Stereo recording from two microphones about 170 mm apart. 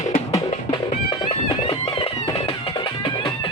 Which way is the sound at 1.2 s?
35° left (ahead or behind).